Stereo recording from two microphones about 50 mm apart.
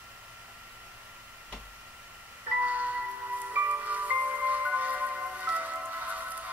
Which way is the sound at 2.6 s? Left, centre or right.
Right.